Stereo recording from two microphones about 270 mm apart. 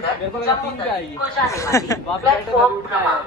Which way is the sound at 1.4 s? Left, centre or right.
Centre.